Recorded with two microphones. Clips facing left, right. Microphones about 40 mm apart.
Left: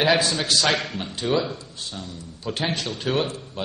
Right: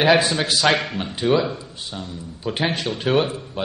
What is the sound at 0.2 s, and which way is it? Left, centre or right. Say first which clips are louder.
A man's voice: right 3 dB; centre.